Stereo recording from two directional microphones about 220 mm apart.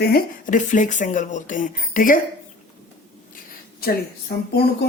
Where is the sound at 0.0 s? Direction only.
40° left (ahead or behind).